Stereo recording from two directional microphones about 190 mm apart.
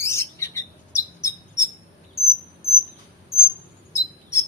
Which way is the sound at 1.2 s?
15° left (ahead or behind).